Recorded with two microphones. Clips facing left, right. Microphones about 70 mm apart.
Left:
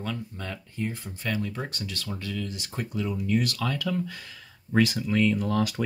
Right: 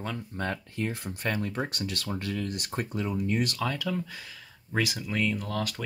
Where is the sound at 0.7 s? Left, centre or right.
Right.